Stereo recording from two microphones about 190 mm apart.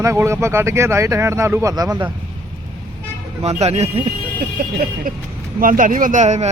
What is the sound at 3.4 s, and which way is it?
Speech, 35° right (ahead or behind).